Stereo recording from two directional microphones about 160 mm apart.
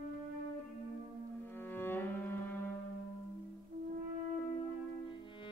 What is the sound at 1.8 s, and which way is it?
Cello, 15° left (ahead or behind).